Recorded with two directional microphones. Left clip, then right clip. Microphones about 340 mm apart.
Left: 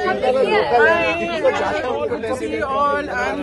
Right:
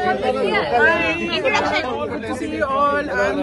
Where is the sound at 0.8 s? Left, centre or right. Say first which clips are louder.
Left 1 dB; centre.